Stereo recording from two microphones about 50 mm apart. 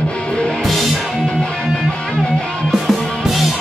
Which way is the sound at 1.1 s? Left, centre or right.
Centre.